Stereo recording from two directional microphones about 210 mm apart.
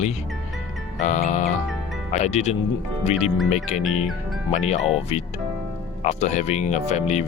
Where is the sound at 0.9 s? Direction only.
35° left (ahead or behind).